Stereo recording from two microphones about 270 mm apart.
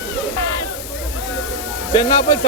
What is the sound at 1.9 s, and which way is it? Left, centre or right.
Speech, centre.